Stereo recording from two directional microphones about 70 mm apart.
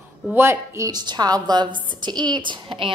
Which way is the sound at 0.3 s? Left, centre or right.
Right.